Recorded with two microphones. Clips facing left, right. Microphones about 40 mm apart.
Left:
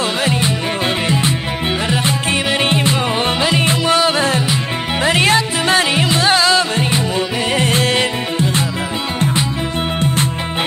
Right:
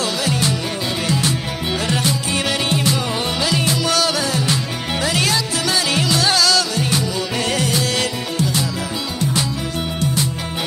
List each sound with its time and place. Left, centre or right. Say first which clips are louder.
0.2 s music: left 3 dB; left